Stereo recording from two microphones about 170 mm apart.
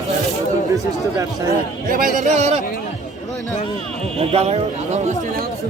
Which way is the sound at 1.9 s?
50° right (ahead or behind).